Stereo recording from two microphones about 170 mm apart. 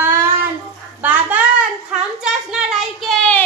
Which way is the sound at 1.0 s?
10° right (ahead or behind).